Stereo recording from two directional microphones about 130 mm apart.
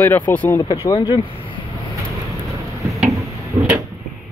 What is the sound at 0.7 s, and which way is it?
Speech, 40° left (ahead or behind).